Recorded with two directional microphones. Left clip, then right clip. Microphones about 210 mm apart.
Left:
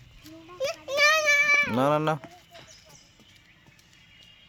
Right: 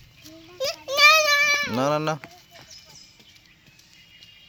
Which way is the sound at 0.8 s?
40° right (ahead or behind).